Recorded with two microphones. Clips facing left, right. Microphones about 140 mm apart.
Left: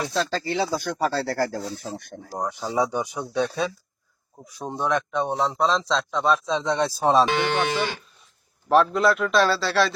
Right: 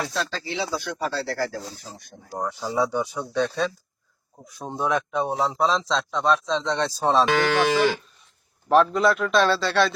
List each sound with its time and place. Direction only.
0.0 s speech: 30° left (ahead or behind)
0.3 s speech: 45° left (ahead or behind)
2.4 s speech: 15° left (ahead or behind)
4.4 s speech: centre (ahead or behind)
7.5 s speech: 90° right
8.7 s speech: centre (ahead or behind)